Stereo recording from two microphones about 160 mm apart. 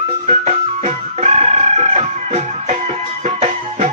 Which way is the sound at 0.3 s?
45° right (ahead or behind).